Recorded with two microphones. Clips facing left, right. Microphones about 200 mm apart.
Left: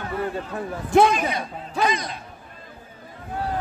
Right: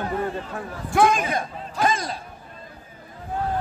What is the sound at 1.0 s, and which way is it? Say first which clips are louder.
A man's voice: even; 50° right (ahead or behind).